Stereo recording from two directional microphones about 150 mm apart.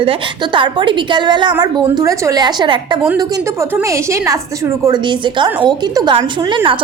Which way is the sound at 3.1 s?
20° right (ahead or behind).